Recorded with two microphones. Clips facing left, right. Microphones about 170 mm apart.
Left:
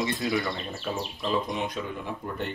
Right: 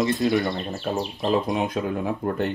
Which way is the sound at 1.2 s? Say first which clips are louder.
Right 6 dB; 40° right (ahead or behind).